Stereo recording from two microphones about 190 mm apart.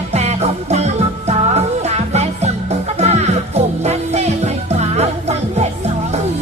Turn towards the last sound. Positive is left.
turn(degrees=-35)  # may be behind; listen again after turning